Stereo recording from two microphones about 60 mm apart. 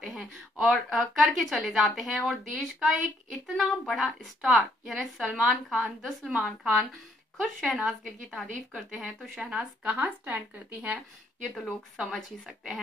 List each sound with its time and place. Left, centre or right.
0.2 s a woman's voice: centre
6.6 s a woman's voice: right
7.7 s a woman's voice: centre
9.4 s a woman's voice: centre
11.6 s a woman's voice: centre